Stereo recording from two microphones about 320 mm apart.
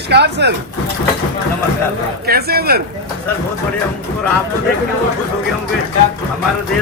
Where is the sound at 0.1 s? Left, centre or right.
Right.